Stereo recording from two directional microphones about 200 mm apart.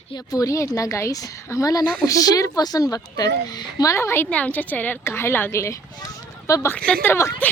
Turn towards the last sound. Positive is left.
turn(degrees=15)  # may be behind; listen again after turning